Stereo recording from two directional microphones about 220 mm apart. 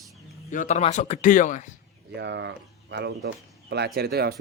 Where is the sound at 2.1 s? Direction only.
50° right (ahead or behind).